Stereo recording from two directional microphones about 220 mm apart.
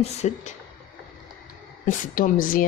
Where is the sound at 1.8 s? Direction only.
35° left (ahead or behind).